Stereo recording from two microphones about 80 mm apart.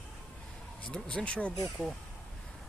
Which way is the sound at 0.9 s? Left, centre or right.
Centre.